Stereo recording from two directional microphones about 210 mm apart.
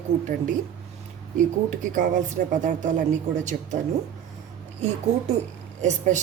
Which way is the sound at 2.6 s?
35° right (ahead or behind).